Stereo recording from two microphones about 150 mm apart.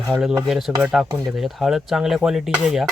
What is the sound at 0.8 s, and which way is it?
Speech, 5° right (ahead or behind).